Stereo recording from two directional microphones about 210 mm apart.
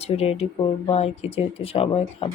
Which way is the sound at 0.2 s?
30° left (ahead or behind).